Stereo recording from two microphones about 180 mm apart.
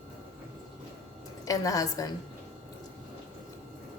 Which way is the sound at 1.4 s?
20° left (ahead or behind).